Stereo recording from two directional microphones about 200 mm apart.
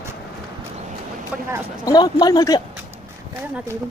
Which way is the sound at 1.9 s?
20° left (ahead or behind).